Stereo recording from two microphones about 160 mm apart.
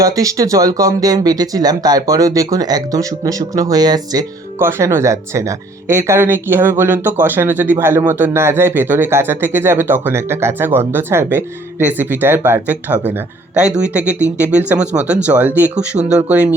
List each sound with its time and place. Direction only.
0.0 s speech: 20° right (ahead or behind)